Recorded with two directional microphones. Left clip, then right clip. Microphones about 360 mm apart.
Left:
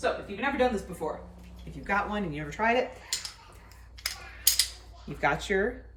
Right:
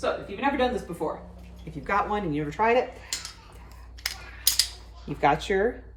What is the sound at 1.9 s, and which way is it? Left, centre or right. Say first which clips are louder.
Speech: right 4 dB; centre.